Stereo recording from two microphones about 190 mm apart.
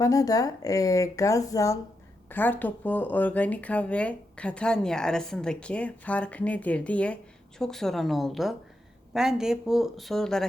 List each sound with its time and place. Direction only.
0.0 s a woman's voice: 20° left (ahead or behind); by 10.4 s centre (ahead or behind)